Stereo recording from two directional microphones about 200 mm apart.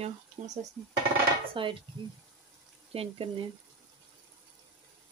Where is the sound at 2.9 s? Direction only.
30° right (ahead or behind).